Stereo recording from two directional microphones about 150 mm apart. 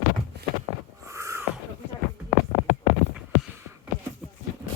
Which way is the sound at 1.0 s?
20° right (ahead or behind).